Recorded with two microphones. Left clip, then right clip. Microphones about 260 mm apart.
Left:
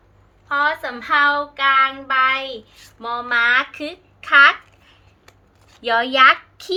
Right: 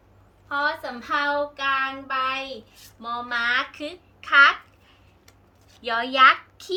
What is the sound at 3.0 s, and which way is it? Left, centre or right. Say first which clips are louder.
Speech: left 5 dB; centre.